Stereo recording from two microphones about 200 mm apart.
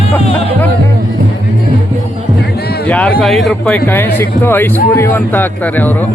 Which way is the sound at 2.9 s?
5° left (ahead or behind).